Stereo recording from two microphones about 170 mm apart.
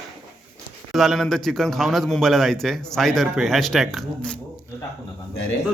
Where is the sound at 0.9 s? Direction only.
Centre (ahead or behind).